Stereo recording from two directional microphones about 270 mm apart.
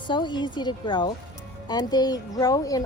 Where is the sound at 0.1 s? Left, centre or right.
Centre.